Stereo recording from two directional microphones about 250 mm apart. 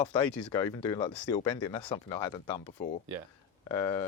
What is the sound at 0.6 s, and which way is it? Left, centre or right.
Speech, centre.